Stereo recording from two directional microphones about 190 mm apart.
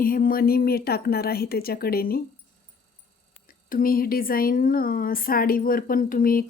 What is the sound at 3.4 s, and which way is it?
Speech, 50° left (ahead or behind).